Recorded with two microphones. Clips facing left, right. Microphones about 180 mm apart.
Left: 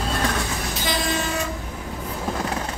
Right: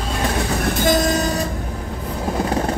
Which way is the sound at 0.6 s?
50° right (ahead or behind).